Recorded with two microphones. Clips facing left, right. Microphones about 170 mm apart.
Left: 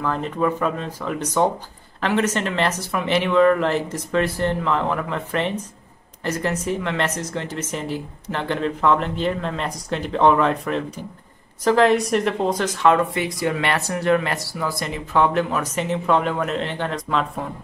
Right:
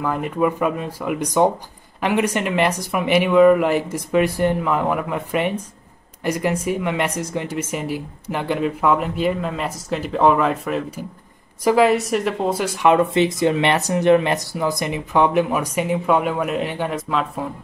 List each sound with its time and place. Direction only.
0.0 s speech: 10° right (ahead or behind)